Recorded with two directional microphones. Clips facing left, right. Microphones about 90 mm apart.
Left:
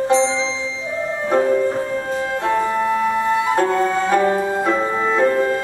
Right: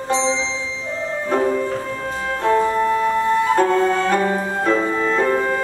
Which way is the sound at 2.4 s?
15° left (ahead or behind).